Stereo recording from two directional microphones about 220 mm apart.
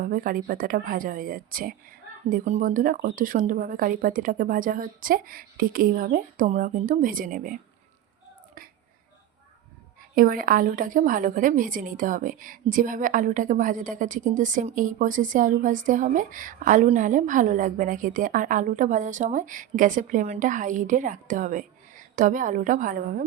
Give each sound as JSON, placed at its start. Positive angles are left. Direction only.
{"t": 0.0, "sound": "a woman's voice", "side_deg": -40}
{"t": 10.2, "sound": "a woman's voice", "side_deg": -40}